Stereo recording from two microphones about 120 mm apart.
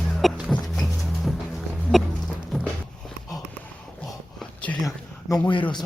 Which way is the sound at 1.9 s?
Centre (ahead or behind).